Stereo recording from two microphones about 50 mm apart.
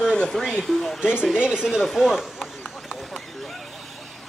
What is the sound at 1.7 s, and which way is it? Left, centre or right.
Speech, centre.